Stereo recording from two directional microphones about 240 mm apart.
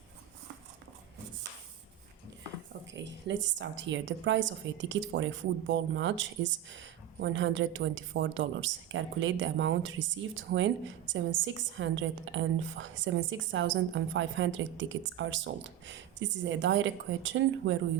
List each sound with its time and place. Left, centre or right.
2.9 s a woman's voice: right